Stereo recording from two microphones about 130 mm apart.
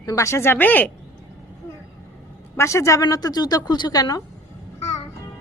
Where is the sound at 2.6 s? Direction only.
20° left (ahead or behind).